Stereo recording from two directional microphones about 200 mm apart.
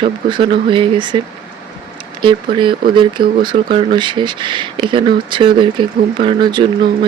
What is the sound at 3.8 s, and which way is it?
Speech, 25° right (ahead or behind).